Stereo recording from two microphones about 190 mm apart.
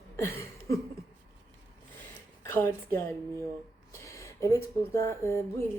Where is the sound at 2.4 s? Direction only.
10° left (ahead or behind).